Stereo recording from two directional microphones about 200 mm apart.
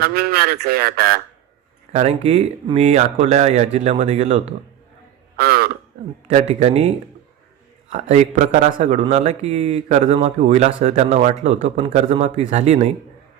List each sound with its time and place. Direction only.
0.0 s speech: 50° right (ahead or behind)
1.9 s speech: 35° right (ahead or behind)
5.4 s a sound: 50° right (ahead or behind)
6.5 s speech: 30° right (ahead or behind)